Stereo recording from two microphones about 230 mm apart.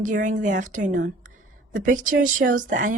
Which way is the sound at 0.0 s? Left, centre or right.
Right.